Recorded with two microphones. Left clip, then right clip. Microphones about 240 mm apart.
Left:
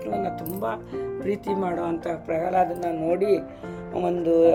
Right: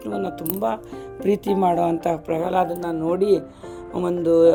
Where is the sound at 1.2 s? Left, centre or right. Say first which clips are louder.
Right 8 dB; right.